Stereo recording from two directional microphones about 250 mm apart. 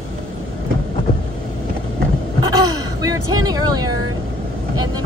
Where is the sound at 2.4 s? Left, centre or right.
Centre.